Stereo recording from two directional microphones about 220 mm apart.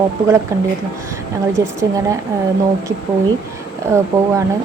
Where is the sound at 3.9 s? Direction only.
10° right (ahead or behind).